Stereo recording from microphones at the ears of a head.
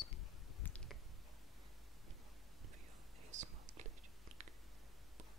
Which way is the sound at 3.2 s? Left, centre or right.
Right.